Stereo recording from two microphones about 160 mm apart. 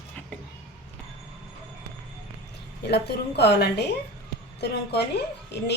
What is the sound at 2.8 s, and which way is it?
A woman's voice, 90° left.